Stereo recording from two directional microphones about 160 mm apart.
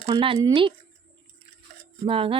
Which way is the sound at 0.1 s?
30° right (ahead or behind).